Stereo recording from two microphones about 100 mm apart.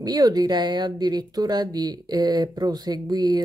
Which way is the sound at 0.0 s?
40° right (ahead or behind).